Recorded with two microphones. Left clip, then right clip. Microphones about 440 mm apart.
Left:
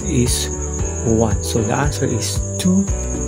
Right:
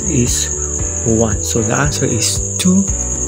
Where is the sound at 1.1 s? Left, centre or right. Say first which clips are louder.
Right 2 dB; left.